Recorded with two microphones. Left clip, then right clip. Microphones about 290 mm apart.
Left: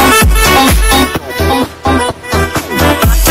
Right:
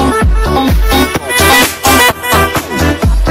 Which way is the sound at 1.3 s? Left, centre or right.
Centre.